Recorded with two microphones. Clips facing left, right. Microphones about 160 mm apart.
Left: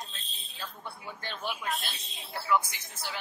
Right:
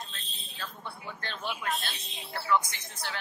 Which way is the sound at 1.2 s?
10° left (ahead or behind).